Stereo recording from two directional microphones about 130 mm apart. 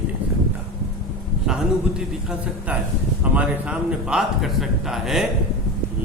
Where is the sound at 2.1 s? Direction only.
5° right (ahead or behind).